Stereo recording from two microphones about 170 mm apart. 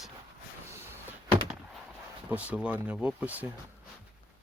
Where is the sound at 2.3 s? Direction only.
5° right (ahead or behind).